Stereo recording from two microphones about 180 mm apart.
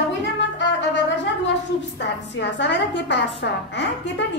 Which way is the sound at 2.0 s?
75° left (ahead or behind).